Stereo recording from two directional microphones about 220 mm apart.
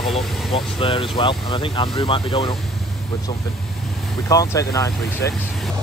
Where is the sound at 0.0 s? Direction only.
Centre (ahead or behind).